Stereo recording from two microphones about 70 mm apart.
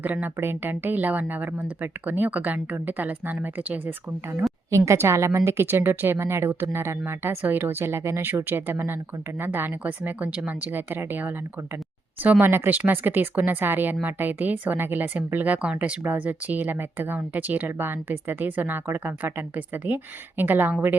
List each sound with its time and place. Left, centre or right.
0.0 s speech: right
4.9 s a woman's voice: right